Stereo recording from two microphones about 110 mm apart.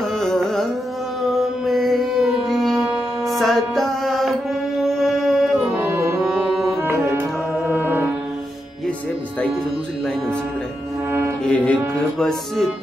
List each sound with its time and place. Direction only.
0.2 s carnatic music: 5° left (ahead or behind)
1.7 s music: centre (ahead or behind)
6.8 s music: 20° right (ahead or behind)
11.1 s music: 20° right (ahead or behind)
11.4 s mantra: 10° left (ahead or behind)
12.2 s music: centre (ahead or behind)